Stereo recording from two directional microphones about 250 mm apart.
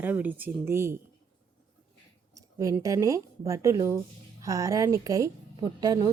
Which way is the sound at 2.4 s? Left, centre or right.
Centre.